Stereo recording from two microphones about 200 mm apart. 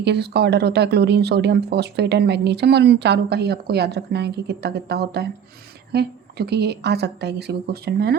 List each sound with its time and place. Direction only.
0.0 s speech: 55° right (ahead or behind)